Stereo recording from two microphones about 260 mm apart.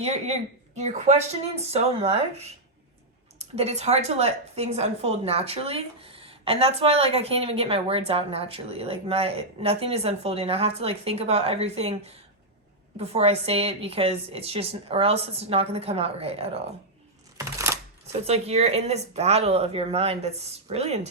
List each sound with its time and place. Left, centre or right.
0.0 s speech: right
3.3 s speech: right
17.3 s a sound: centre
18.3 s speech: right